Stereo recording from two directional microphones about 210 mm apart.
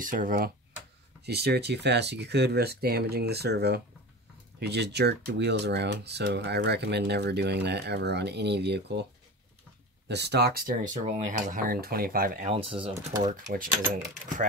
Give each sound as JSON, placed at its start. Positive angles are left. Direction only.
{"t": 0.0, "sound": "speech", "side_deg": -40}
{"t": 1.2, "sound": "speech", "side_deg": -50}
{"t": 10.0, "sound": "speech", "side_deg": -55}
{"t": 12.4, "sound": "speech", "side_deg": -25}
{"t": 13.2, "sound": "speech", "side_deg": -40}